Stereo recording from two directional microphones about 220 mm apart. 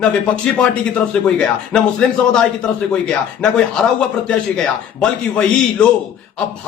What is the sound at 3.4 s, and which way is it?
Speech, 5° left (ahead or behind).